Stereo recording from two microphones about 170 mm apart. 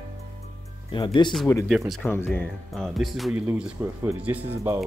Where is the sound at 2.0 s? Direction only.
15° left (ahead or behind).